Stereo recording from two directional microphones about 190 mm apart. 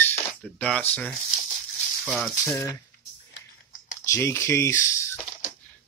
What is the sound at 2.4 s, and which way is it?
Speech, 15° left (ahead or behind).